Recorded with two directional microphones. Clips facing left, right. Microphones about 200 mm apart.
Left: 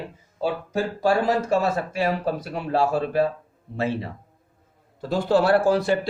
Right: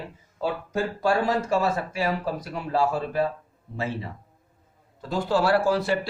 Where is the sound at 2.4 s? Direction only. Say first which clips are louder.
Left 2 dB; 65° left (ahead or behind).